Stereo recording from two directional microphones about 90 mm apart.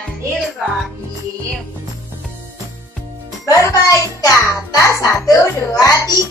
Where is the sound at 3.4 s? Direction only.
40° left (ahead or behind).